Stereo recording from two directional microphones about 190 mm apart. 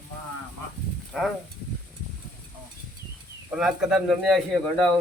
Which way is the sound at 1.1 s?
Centre (ahead or behind).